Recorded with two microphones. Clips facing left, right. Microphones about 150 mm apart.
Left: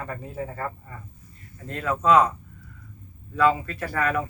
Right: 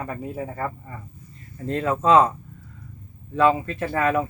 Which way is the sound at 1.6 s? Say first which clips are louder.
Right 2 dB; 30° right (ahead or behind).